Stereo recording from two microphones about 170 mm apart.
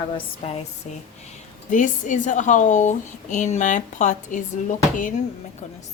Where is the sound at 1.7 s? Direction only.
50° left (ahead or behind).